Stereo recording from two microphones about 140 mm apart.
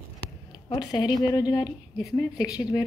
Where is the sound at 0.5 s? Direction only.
30° left (ahead or behind).